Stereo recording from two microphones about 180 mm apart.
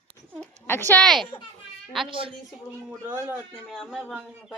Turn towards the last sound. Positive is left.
turn(degrees=-5)  # may be behind; listen again after turning